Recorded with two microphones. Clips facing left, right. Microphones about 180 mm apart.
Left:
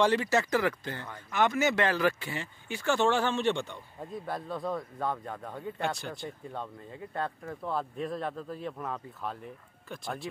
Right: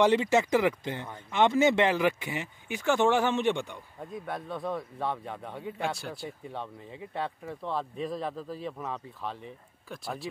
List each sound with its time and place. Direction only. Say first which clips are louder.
0.0 s speech: right 3 dB; 20° right (ahead or behind)
4.0 s speech: even; centre (ahead or behind)
7.2 s speech: even; centre (ahead or behind)